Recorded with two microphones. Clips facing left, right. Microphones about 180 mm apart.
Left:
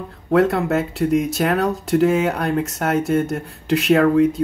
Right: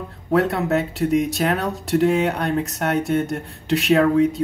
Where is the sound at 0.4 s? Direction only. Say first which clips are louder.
Left 3 dB; centre (ahead or behind).